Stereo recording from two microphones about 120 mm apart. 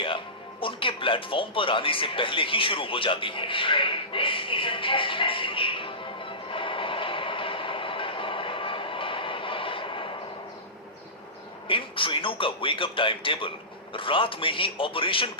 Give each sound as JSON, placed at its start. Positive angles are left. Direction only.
{"t": 0.6, "sound": "music", "side_deg": 45}
{"t": 11.7, "sound": "a man's voice", "side_deg": 45}